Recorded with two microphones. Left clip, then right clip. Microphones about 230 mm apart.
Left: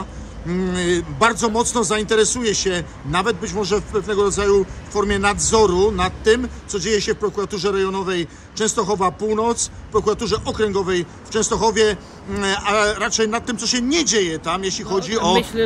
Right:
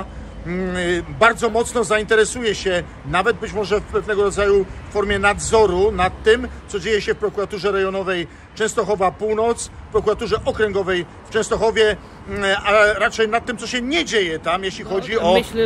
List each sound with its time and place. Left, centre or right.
0.5 s a man's voice: centre